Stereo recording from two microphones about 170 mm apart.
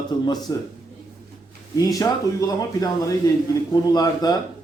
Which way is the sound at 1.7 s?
20° left (ahead or behind).